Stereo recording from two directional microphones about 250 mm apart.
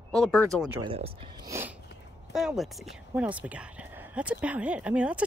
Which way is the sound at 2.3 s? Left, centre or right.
Centre.